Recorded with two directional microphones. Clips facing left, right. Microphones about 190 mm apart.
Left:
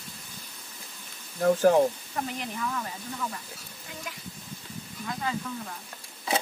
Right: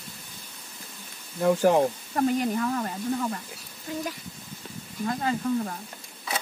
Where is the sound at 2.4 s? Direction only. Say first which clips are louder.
Right 7 dB; 45° right (ahead or behind).